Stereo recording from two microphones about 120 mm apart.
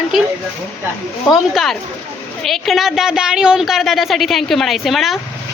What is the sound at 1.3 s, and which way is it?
A woman's voice, centre (ahead or behind).